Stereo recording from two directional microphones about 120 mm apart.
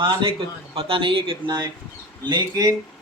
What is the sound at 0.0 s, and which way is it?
Speech, 40° right (ahead or behind).